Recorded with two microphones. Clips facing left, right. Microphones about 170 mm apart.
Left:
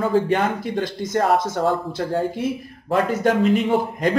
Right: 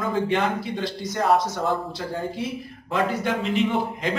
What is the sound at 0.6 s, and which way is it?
A man's voice, 50° left (ahead or behind).